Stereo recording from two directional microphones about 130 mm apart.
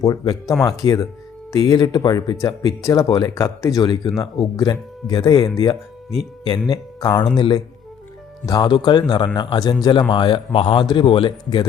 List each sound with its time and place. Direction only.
0.0 s speech: 25° left (ahead or behind)
3.8 s a man's voice: 35° left (ahead or behind)